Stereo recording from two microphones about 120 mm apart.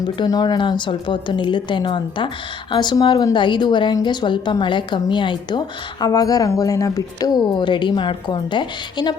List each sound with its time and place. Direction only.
0.0 s a woman's voice: 35° left (ahead or behind)